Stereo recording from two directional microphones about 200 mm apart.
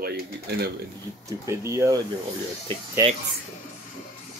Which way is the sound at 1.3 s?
15° right (ahead or behind).